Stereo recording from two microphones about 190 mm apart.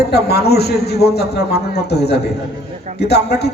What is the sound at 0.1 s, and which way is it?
A man's voice, 60° left (ahead or behind).